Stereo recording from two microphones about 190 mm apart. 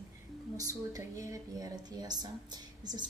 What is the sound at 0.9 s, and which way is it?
A woman's voice, 15° right (ahead or behind).